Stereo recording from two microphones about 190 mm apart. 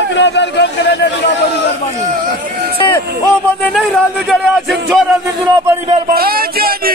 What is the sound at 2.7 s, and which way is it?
Music, 25° left (ahead or behind).